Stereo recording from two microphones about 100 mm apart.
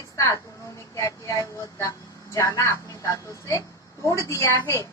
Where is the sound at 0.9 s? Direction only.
30° left (ahead or behind).